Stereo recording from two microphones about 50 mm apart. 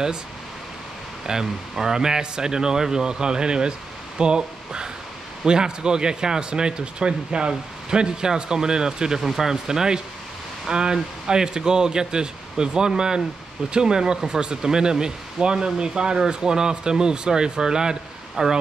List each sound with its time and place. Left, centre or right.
1.2 s speech: centre